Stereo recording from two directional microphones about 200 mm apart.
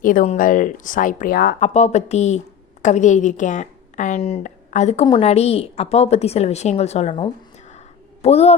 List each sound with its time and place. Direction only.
0.0 s a woman's voice: 40° left (ahead or behind)
1.5 s a woman's voice: 35° left (ahead or behind)